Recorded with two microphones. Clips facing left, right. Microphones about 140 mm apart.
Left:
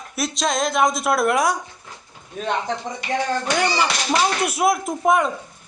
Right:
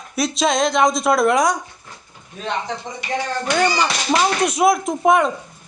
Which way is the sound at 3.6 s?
5° left (ahead or behind).